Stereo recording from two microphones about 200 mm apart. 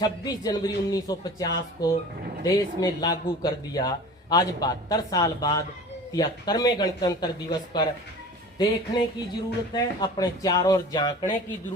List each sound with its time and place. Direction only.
0.0 s a man's voice: 20° left (ahead or behind)
8.5 s a man's voice: 20° left (ahead or behind)